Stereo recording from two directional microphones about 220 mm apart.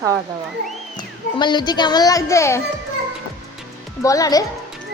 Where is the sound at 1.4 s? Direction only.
20° left (ahead or behind).